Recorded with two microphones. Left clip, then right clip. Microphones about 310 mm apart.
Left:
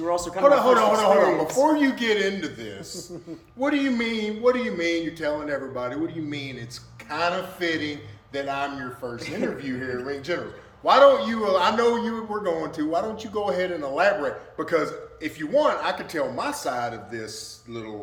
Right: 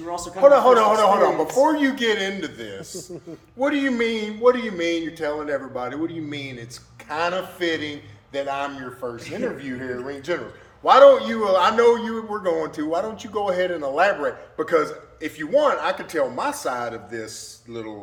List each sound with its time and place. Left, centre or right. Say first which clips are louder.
0.0 s a man's voice: left 4 dB; centre
0.4 s a man's voice: right 4 dB; centre